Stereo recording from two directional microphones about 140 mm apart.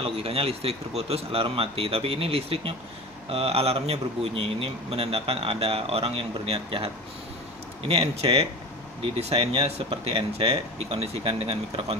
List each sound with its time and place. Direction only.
0.0 s speech: 45° right (ahead or behind)
7.9 s speech: 45° right (ahead or behind)